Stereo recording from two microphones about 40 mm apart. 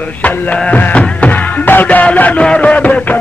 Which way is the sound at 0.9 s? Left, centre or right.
Left.